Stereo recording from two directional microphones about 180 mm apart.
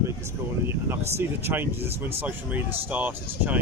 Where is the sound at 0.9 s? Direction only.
15° right (ahead or behind).